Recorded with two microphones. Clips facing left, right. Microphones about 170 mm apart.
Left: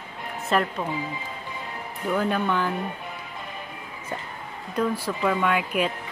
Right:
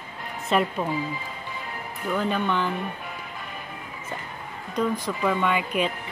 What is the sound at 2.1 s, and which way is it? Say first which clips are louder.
Speech: left 1 dB; 5° left (ahead or behind).